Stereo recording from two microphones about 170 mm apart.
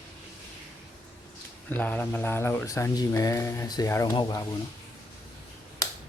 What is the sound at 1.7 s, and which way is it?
Speech, 10° left (ahead or behind).